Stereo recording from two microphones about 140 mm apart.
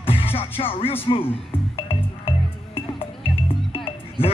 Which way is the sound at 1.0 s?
40° left (ahead or behind).